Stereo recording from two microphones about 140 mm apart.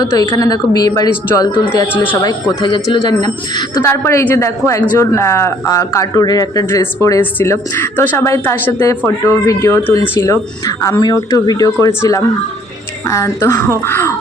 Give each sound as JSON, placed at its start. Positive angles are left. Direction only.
{"t": 0.0, "sound": "speech", "side_deg": 25}
{"t": 2.6, "sound": "speech", "side_deg": 35}
{"t": 3.8, "sound": "speech", "side_deg": 15}